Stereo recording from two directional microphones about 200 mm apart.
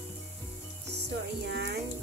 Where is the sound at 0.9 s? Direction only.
55° right (ahead or behind).